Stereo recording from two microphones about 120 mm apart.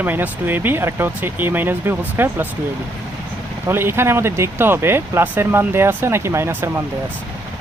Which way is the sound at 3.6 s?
20° right (ahead or behind).